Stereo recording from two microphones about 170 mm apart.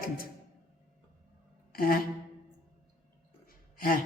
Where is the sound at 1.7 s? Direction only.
60° left (ahead or behind).